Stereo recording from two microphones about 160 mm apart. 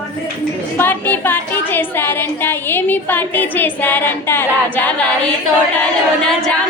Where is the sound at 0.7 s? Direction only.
10° left (ahead or behind).